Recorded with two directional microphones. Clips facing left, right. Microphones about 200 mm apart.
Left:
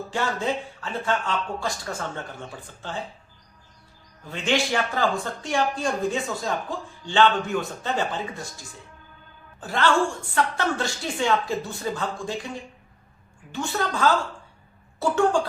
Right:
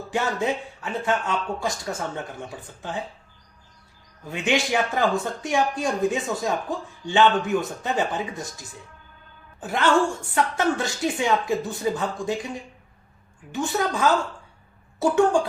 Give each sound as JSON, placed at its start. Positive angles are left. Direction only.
{"t": 0.1, "sound": "speech", "side_deg": -20}
{"t": 4.3, "sound": "speech", "side_deg": -15}
{"t": 9.6, "sound": "a woman's voice", "side_deg": -20}
{"t": 13.5, "sound": "speech", "side_deg": -20}